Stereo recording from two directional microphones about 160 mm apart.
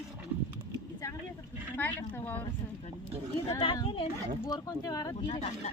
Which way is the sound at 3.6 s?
30° left (ahead or behind).